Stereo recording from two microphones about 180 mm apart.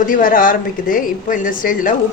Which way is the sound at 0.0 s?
50° left (ahead or behind).